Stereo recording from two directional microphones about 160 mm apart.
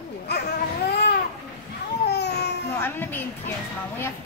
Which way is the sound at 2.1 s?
90° left.